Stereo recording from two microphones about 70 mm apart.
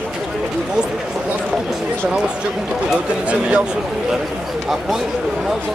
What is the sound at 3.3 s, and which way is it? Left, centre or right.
Speech, centre.